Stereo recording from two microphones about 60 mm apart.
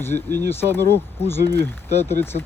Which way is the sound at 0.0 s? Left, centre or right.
Left.